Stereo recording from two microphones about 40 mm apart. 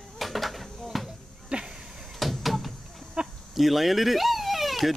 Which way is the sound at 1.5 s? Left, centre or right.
Right.